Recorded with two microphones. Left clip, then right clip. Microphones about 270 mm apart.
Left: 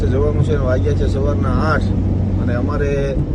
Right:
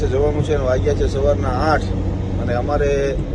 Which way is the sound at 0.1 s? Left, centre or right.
Centre.